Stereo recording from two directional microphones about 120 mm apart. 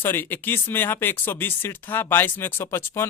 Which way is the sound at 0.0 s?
15° left (ahead or behind).